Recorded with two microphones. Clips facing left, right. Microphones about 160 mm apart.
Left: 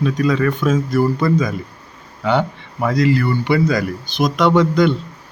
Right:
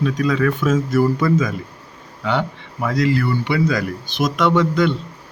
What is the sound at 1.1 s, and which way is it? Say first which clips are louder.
Speech: left 1 dB; 35° left (ahead or behind).